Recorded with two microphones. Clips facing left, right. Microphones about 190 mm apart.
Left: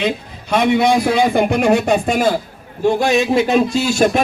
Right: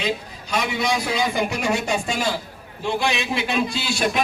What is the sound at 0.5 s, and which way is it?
A man's voice, 55° left (ahead or behind).